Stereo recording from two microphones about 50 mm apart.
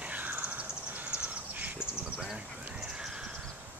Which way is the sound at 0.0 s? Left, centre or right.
Right.